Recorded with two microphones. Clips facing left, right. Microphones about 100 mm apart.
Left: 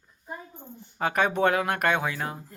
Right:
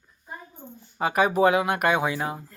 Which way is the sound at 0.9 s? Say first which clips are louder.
Right 3 dB; 5° right (ahead or behind).